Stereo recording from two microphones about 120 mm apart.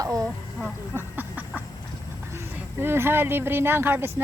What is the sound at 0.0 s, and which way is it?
Speech, 30° right (ahead or behind).